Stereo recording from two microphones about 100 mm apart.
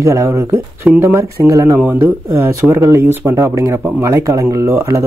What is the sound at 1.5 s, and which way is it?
Speech, 35° right (ahead or behind).